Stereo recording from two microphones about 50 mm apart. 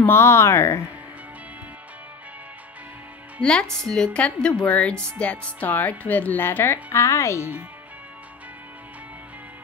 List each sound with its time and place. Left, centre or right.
0.0 s speech: left
3.8 s a woman's voice: centre
4.6 s speech: left
6.4 s speech: left